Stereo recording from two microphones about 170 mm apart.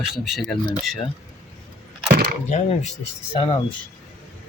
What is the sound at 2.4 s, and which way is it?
Speech, 40° left (ahead or behind).